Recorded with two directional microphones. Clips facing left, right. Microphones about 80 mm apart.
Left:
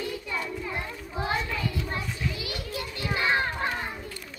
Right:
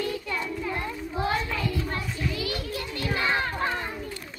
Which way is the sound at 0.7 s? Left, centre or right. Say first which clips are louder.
Right 3 dB; centre.